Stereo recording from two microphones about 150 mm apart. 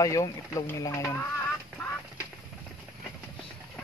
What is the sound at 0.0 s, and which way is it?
Speech, 25° left (ahead or behind).